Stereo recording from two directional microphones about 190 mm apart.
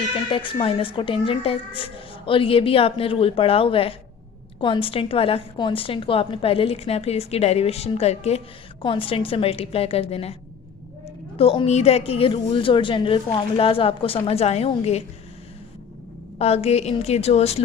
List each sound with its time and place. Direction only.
0.3 s a woman's voice: 25° left (ahead or behind)
11.3 s a woman's voice: 30° left (ahead or behind)
16.4 s a woman's voice: 35° left (ahead or behind)